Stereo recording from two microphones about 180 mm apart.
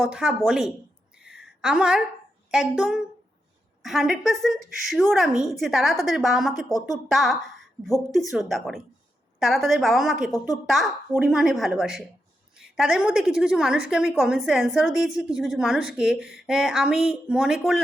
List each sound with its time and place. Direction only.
0.0 s a woman's voice: 5° right (ahead or behind)
1.1 s a sound: 5° right (ahead or behind)
1.6 s a woman's voice: 5° right (ahead or behind)
6.7 s speech: 20° left (ahead or behind)
7.1 s a woman's voice: centre (ahead or behind)